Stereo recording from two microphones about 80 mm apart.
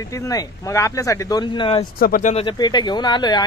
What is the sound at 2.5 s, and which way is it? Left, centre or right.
Speech, left.